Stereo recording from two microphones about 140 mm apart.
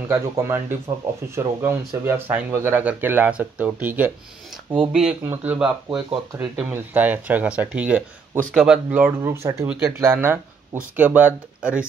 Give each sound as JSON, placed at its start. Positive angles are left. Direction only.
{"t": 0.1, "sound": "speech", "side_deg": -20}